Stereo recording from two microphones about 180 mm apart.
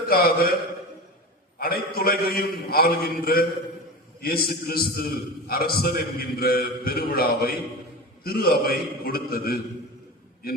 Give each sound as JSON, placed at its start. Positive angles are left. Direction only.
{"t": 0.1, "sound": "a man's voice", "side_deg": 55}
{"t": 1.5, "sound": "a man's voice", "side_deg": 55}